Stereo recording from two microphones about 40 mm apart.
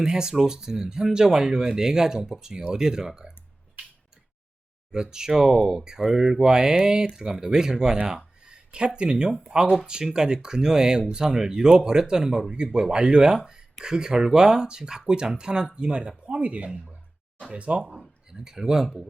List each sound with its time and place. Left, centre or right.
0.0 s speech: centre
4.9 s speech: centre
13.3 s speech: centre; by 17.9 s right
18.3 s speech: centre